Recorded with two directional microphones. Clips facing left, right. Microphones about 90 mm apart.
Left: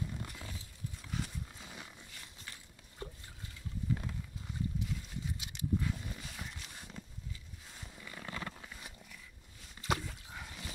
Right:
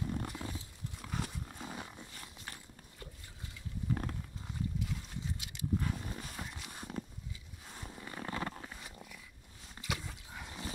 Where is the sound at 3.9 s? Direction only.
50° right (ahead or behind).